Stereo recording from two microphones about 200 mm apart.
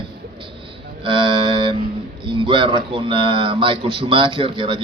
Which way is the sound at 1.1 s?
25° right (ahead or behind).